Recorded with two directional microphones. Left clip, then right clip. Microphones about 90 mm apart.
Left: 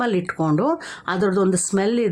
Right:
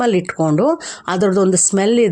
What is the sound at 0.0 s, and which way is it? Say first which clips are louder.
Speech: right 6 dB; 30° right (ahead or behind).